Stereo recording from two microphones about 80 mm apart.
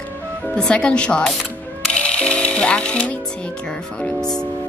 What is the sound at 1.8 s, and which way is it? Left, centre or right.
Music, centre.